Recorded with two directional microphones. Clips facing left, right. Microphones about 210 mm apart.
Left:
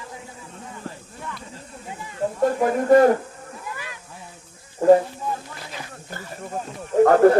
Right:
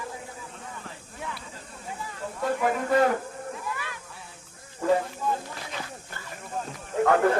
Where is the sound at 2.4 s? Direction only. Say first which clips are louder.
Left 7 dB; 45° left (ahead or behind).